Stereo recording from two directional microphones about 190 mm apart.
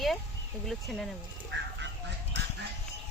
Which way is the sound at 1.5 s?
70° right (ahead or behind).